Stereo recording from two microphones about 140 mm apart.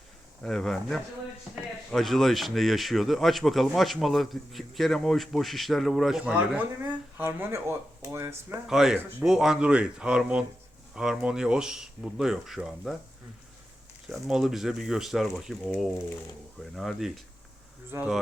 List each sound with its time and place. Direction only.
0.4 s speech: centre (ahead or behind)
7.2 s speech: 15° right (ahead or behind)
8.6 s speech: 5° right (ahead or behind)
14.1 s speech: 5° right (ahead or behind)